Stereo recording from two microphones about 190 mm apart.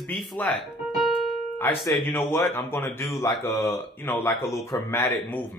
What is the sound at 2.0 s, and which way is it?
Speech, 10° left (ahead or behind).